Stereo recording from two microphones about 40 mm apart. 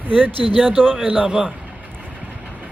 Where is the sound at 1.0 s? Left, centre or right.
Right.